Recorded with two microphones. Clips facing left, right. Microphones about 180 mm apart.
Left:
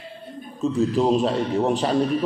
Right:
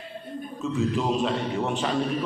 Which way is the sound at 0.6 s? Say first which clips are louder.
Left 6 dB; 35° left (ahead or behind).